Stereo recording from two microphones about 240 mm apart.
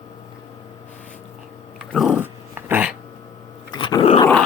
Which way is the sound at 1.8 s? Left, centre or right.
Centre.